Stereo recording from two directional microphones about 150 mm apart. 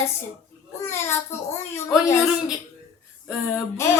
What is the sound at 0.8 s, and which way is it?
Speech, 15° left (ahead or behind).